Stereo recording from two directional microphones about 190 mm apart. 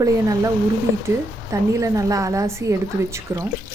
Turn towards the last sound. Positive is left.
turn(degrees=-15)  # may be behind; listen again after turning